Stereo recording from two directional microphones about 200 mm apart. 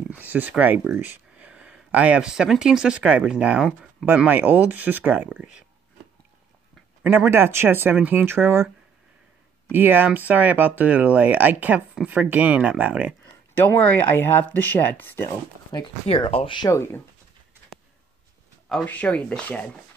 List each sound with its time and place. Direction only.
0.1 s speech: 10° right (ahead or behind)
7.0 s speech: 10° right (ahead or behind)
9.7 s speech: 10° right (ahead or behind)
13.6 s speech: 10° left (ahead or behind)
15.7 s speech: 25° left (ahead or behind)
18.7 s speech: 5° left (ahead or behind)